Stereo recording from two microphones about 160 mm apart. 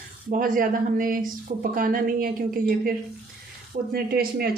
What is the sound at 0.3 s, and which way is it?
A woman's voice, 55° right (ahead or behind).